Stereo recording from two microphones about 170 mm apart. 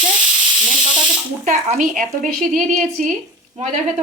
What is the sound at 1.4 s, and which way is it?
Speech, 45° right (ahead or behind).